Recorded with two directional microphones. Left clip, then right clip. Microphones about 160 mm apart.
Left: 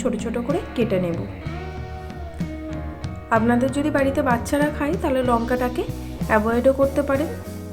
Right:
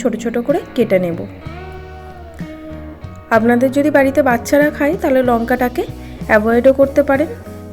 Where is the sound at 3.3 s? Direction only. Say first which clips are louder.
Right 7 dB; 40° right (ahead or behind).